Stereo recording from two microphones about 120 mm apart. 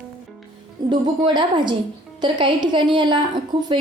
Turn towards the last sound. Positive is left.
turn(degrees=-40)  # may be behind; listen again after turning